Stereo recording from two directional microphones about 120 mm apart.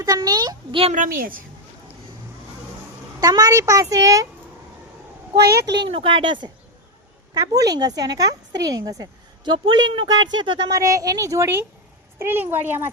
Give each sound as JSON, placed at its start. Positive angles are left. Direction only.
{"t": 0.0, "sound": "a woman's voice", "side_deg": -30}
{"t": 3.2, "sound": "a woman's voice", "side_deg": -35}
{"t": 5.3, "sound": "a woman's voice", "side_deg": -35}
{"t": 7.3, "sound": "a woman's voice", "side_deg": -30}
{"t": 10.8, "sound": "a woman's voice", "side_deg": -25}